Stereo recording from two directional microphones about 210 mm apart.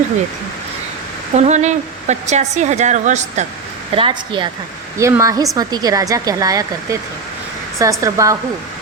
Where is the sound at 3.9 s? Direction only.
25° right (ahead or behind).